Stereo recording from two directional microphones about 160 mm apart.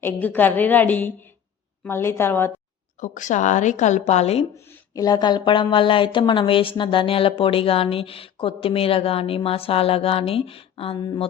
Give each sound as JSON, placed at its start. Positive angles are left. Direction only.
{"t": 0.0, "sound": "a woman's voice", "side_deg": 10}
{"t": 3.0, "sound": "a woman's voice", "side_deg": 50}
{"t": 4.5, "sound": "speech", "side_deg": 15}